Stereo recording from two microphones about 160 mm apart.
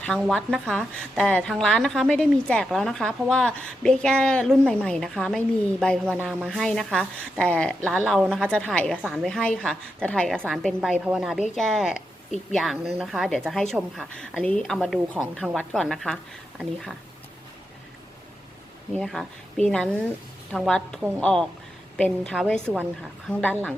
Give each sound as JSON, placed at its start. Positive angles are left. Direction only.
{"t": 0.0, "sound": "a woman's voice", "side_deg": 5}
{"t": 11.9, "sound": "a sound", "side_deg": 50}
{"t": 12.5, "sound": "a woman's voice", "side_deg": 0}
{"t": 18.9, "sound": "a woman's voice", "side_deg": 0}
{"t": 22.6, "sound": "a woman's voice", "side_deg": -10}
{"t": 23.3, "sound": "speech", "side_deg": 10}